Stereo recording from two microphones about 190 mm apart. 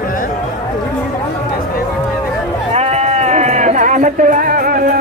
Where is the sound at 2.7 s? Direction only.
35° right (ahead or behind).